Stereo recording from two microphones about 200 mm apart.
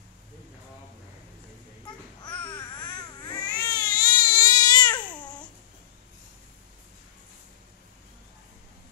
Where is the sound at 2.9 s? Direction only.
20° left (ahead or behind).